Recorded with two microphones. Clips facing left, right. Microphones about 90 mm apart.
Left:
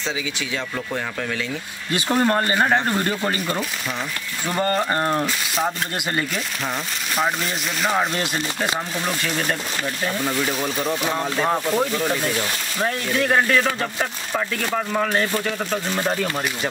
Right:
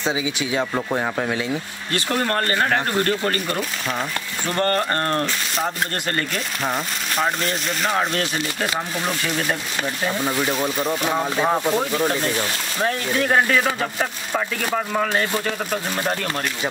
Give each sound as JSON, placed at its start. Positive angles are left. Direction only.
{"t": 0.6, "sound": "speech", "side_deg": -25}
{"t": 1.9, "sound": "speech", "side_deg": 15}
{"t": 7.2, "sound": "speech", "side_deg": 0}